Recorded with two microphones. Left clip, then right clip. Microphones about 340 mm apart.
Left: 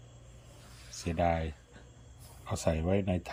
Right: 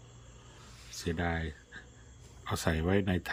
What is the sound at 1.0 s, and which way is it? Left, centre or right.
Speech, centre.